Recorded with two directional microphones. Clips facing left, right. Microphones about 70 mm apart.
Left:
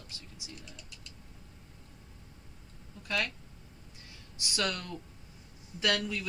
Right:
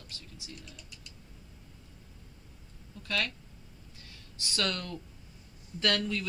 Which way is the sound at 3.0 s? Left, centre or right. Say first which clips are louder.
Even; centre.